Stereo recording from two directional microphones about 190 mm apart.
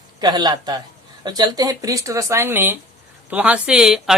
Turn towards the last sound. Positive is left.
turn(degrees=-5)  # may be behind; listen again after turning